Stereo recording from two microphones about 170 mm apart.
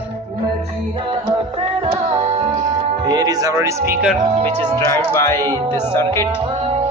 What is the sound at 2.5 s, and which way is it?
Speech, 25° right (ahead or behind).